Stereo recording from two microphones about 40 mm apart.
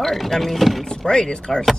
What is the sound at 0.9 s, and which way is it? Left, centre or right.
Speech, centre.